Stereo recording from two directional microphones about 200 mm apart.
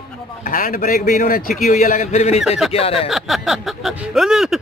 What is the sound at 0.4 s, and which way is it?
A man's voice, 40° left (ahead or behind).